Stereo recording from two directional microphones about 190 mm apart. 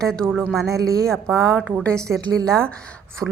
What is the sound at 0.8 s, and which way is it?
Speech, 50° right (ahead or behind).